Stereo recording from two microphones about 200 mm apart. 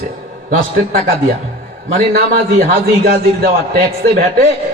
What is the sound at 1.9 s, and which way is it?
A man's voice, 50° right (ahead or behind).